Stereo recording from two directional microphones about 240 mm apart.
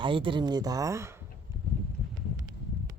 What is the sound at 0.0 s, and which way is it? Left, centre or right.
Speech, right.